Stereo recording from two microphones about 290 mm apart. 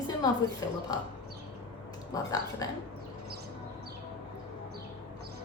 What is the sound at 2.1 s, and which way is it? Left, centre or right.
Speech, centre.